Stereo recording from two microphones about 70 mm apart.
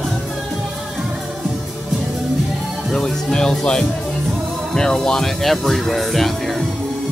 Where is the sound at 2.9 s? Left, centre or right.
Centre.